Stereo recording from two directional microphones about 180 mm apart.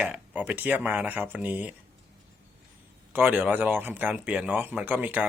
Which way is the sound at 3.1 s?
10° right (ahead or behind).